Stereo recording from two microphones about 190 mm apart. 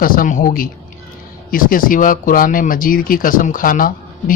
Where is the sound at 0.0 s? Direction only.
50° left (ahead or behind).